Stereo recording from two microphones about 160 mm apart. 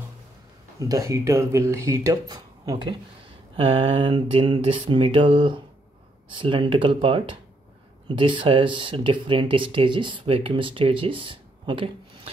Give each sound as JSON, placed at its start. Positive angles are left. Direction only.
{"t": 0.7, "sound": "speech", "side_deg": -20}